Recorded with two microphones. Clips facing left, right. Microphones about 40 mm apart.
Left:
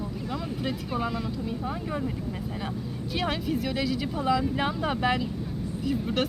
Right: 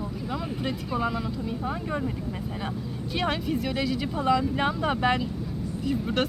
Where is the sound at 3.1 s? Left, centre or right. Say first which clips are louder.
Right 1 dB; centre.